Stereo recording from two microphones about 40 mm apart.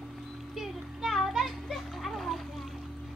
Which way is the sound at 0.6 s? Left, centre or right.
Centre.